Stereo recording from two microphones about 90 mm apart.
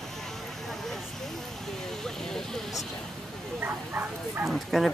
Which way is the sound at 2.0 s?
5° left (ahead or behind).